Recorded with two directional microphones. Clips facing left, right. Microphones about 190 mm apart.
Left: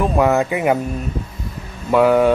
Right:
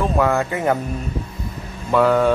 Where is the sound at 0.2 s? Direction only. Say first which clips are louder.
Left 4 dB; 15° left (ahead or behind).